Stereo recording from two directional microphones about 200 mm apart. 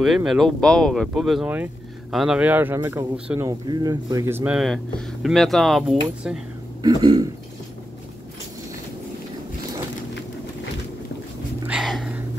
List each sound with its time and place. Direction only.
0.0 s speech: centre (ahead or behind)
6.8 s speech: 20° right (ahead or behind)
11.6 s a sound: 5° right (ahead or behind)